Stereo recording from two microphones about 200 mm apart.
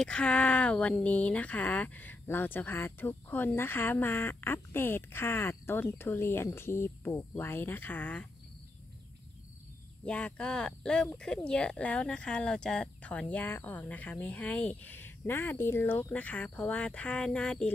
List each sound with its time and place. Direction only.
0.0 s speech: 5° left (ahead or behind)
10.0 s speech: 5° left (ahead or behind)